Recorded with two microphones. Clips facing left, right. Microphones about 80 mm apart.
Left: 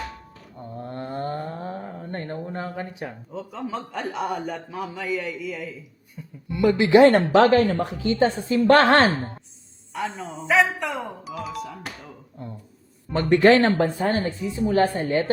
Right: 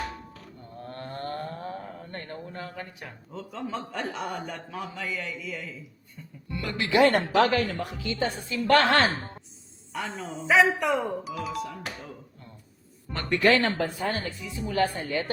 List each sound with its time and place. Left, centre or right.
2.0 s a sound: left
3.3 s a man's voice: centre
6.6 s speech: centre
7.4 s speech: left
9.9 s a man's voice: centre
13.3 s speech: left